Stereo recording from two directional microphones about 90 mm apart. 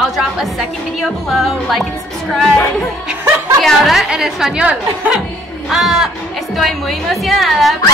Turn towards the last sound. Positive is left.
turn(degrees=0)  # may be behind; listen again after turning